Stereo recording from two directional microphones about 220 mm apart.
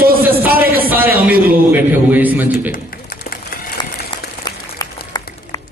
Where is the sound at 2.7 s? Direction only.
40° left (ahead or behind).